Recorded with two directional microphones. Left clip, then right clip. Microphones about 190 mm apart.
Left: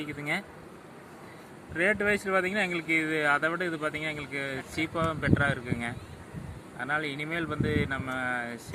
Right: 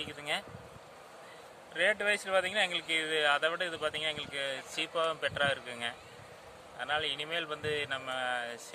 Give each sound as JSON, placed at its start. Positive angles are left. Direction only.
{"t": 1.7, "sound": "speech", "side_deg": -5}